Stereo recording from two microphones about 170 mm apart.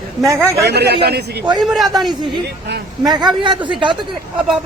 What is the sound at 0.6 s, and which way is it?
Speech, 75° right (ahead or behind).